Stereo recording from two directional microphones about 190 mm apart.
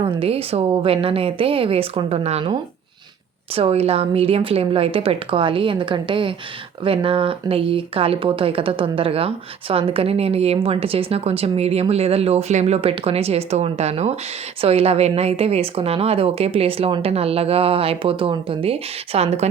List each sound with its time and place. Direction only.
0.0 s speech: 30° right (ahead or behind)